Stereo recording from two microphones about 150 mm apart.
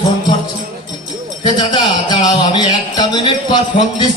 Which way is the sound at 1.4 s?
30° left (ahead or behind).